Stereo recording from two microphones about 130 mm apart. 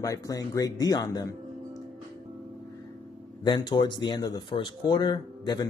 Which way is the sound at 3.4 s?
35° left (ahead or behind).